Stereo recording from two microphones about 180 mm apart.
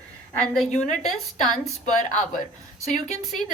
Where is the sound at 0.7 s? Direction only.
40° left (ahead or behind).